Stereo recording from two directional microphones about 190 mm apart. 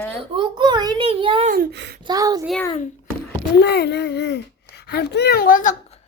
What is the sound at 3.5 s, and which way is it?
A woman's voice, 60° left (ahead or behind).